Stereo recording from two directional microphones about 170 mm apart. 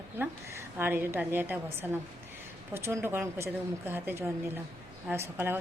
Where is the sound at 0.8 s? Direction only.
10° right (ahead or behind).